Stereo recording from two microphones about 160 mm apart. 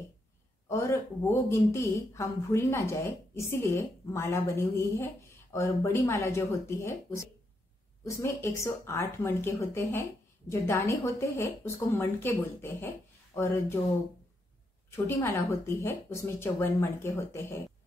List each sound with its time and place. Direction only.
0.7 s speech: 20° left (ahead or behind)
14.9 s speech: 15° left (ahead or behind)